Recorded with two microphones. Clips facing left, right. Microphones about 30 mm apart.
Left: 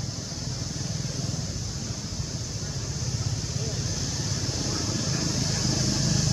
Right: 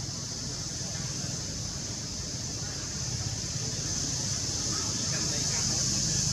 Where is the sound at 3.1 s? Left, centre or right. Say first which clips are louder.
Left 3 dB; centre; by 6.3 s left.